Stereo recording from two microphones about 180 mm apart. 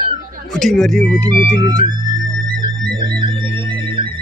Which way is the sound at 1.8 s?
25° right (ahead or behind).